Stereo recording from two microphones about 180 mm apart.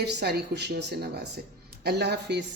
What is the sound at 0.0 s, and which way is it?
A woman's voice, 65° right (ahead or behind).